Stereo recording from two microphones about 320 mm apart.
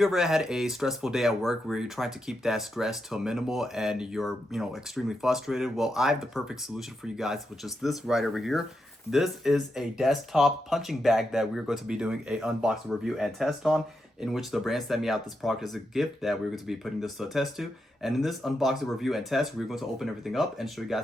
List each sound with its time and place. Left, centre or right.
0.0 s speech: centre